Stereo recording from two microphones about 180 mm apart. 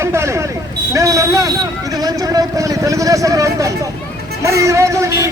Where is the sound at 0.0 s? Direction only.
15° right (ahead or behind).